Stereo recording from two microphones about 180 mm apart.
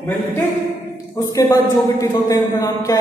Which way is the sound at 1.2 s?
15° left (ahead or behind).